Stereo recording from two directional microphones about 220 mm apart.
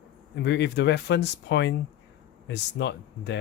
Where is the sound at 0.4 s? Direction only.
50° left (ahead or behind).